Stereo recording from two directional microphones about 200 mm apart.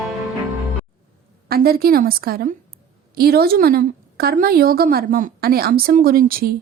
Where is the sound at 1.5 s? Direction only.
50° right (ahead or behind).